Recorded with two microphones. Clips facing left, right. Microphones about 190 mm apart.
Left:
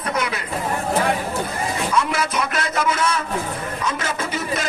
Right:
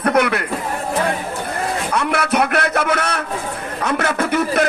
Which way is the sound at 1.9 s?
65° right (ahead or behind).